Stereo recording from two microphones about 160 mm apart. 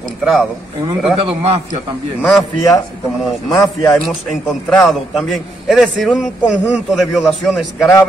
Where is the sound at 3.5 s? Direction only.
20° left (ahead or behind).